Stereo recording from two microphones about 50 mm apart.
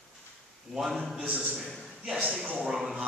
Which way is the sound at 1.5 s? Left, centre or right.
Centre.